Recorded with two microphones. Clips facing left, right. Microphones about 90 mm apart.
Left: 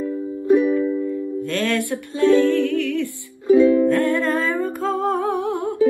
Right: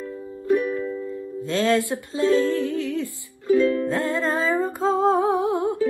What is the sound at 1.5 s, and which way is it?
Music, 25° right (ahead or behind).